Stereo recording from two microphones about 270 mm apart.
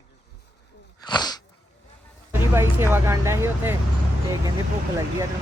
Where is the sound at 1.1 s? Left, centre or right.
Centre.